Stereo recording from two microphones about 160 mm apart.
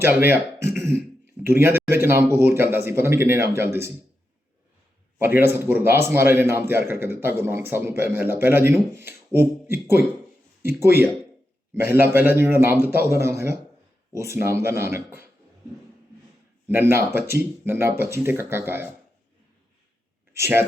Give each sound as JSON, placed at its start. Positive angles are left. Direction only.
{"t": 0.0, "sound": "a man's voice", "side_deg": -15}
{"t": 0.8, "sound": "a sound", "side_deg": -15}
{"t": 1.5, "sound": "a man's voice", "side_deg": -15}
{"t": 5.2, "sound": "a man's voice", "side_deg": -15}
{"t": 16.6, "sound": "a man's voice", "side_deg": -15}
{"t": 20.3, "sound": "speech", "side_deg": -15}